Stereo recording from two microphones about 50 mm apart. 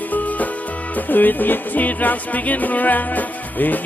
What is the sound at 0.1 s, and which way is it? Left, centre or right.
Music, left.